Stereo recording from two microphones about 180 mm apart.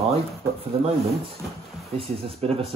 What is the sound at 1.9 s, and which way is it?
Speech, 30° right (ahead or behind).